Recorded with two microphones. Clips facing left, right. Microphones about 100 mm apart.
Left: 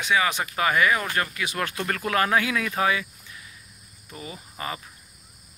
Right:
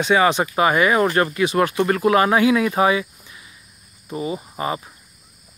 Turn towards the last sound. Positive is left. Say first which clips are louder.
# right 9 dB
turn(degrees=-25)  # may be behind; listen again after turning